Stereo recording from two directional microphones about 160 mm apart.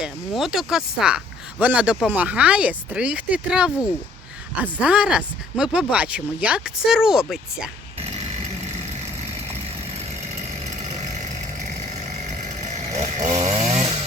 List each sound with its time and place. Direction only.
0.0 s speech: centre (ahead or behind)
12.7 s chainsaw: 45° right (ahead or behind)